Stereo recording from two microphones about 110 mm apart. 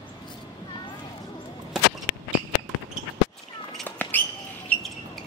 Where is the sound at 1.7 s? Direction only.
5° right (ahead or behind).